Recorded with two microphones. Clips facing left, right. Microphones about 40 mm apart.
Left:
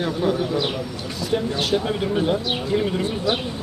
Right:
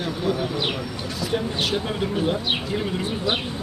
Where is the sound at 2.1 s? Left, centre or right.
Centre.